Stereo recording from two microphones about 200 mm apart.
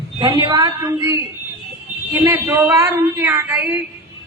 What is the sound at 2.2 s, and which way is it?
A man's voice, 15° right (ahead or behind).